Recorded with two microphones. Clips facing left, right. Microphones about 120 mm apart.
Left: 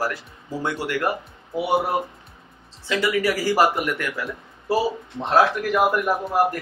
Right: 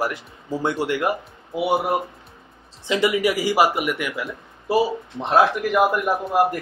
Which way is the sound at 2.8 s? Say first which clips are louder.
Right 2 dB; 20° right (ahead or behind).